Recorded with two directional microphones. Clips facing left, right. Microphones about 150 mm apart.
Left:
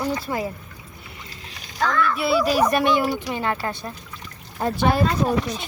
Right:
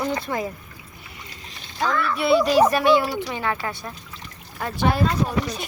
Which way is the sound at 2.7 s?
20° left (ahead or behind).